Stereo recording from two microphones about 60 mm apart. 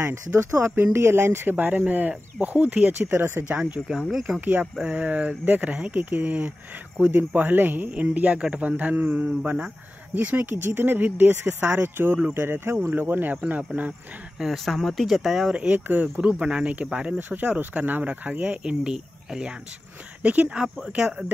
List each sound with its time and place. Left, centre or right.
0.4 s speech: right
3.2 s speech: right
3.9 s speech: centre
4.4 s speech: right
4.8 s speech: right
14.4 s speech: centre
15.5 s speech: centre
18.6 s speech: centre
20.6 s speech: centre